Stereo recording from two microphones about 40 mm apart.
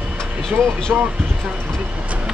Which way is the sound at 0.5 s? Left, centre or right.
Right.